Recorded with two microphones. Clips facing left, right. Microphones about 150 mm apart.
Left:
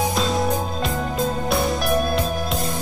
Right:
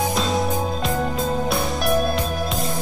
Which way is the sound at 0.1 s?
Centre (ahead or behind).